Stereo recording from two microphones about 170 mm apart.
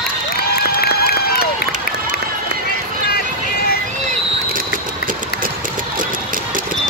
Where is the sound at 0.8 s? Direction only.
65° left (ahead or behind).